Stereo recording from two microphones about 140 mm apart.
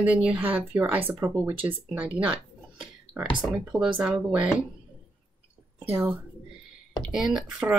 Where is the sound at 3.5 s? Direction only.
10° right (ahead or behind).